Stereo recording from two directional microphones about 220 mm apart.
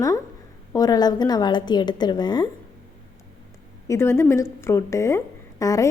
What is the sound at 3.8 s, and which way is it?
A woman's voice, 10° left (ahead or behind).